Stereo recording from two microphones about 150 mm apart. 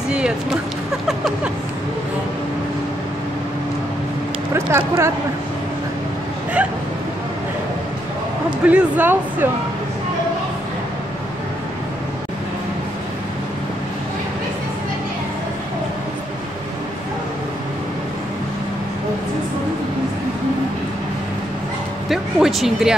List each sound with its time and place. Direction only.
1.0 s a sound: centre (ahead or behind)
4.6 s speech: 20° right (ahead or behind)
8.6 s speech: 10° right (ahead or behind)
22.1 s speech: centre (ahead or behind)